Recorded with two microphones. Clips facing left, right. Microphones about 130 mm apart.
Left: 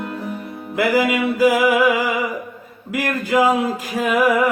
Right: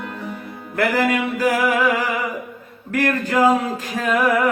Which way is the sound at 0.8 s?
10° left (ahead or behind).